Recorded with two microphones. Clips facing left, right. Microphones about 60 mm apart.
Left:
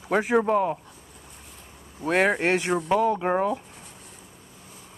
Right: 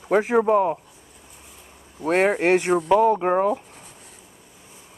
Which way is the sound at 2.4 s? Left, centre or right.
Right.